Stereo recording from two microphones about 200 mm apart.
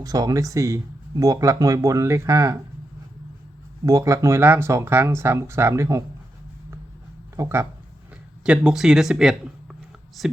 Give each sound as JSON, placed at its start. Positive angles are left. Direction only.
{"t": 0.0, "sound": "speech", "side_deg": -20}
{"t": 3.8, "sound": "speech", "side_deg": -15}
{"t": 7.3, "sound": "speech", "side_deg": -15}